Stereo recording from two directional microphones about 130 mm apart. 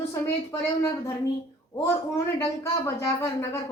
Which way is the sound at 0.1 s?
25° left (ahead or behind).